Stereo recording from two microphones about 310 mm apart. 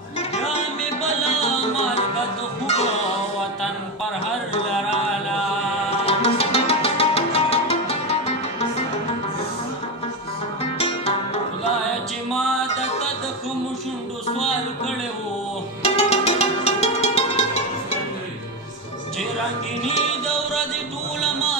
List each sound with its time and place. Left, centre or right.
0.3 s music: centre
2.6 s music: centre
6.0 s music: centre
10.6 s music: centre
12.6 s music: left
15.8 s music: centre